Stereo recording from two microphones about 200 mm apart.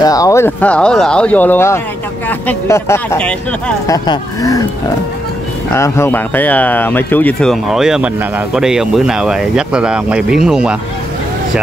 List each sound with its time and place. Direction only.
0.0 s speech: 15° left (ahead or behind)
3.8 s speech: 20° left (ahead or behind)
5.7 s speech: 15° left (ahead or behind); by 10.8 s 5° right (ahead or behind)